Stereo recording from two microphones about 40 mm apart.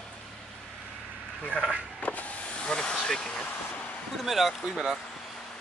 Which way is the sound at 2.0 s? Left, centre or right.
Left.